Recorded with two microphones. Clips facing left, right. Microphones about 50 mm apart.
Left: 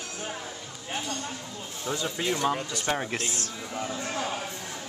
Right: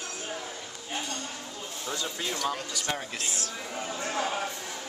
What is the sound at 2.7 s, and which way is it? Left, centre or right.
Speech, left.